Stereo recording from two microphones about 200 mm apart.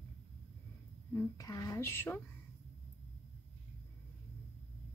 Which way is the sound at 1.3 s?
15° left (ahead or behind).